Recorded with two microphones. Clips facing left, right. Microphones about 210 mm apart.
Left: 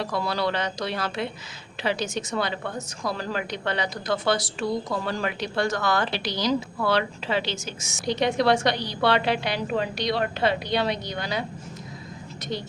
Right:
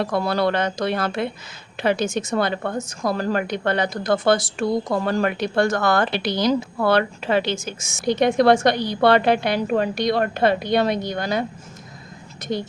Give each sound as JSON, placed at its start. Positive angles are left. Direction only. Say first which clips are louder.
{"t": 0.0, "sound": "a woman's voice", "louder": "right 6 dB", "side_deg": -50}
{"t": 12.5, "sound": "a woman's voice", "louder": "right 6 dB", "side_deg": -50}